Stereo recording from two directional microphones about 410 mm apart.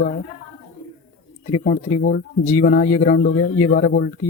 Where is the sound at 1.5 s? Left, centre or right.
Centre.